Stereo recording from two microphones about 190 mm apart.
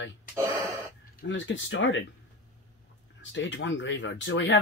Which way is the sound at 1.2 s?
75° left (ahead or behind).